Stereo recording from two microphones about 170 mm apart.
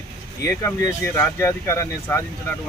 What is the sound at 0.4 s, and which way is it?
Speech, 20° left (ahead or behind).